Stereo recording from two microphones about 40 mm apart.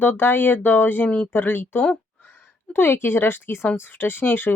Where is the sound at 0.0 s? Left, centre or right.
Left.